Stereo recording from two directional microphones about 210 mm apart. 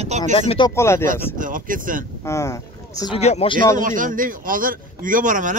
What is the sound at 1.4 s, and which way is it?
Speech, 40° right (ahead or behind).